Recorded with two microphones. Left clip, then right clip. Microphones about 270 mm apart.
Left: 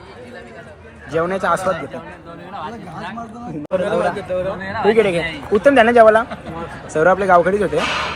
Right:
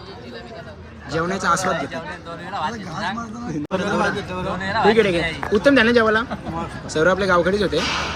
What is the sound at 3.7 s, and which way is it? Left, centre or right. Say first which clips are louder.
Speech: left 4 dB; centre.